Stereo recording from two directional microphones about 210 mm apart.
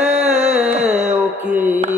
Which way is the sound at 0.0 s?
30° right (ahead or behind).